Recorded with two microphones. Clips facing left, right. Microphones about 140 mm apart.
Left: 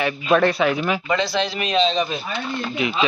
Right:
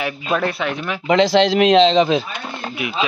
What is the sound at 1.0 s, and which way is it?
A man's voice, 90° right.